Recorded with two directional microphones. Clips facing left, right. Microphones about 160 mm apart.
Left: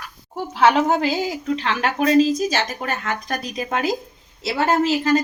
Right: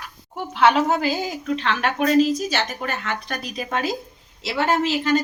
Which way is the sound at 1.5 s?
35° left (ahead or behind).